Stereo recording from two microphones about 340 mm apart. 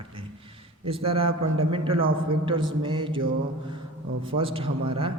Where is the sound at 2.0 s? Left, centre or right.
Right.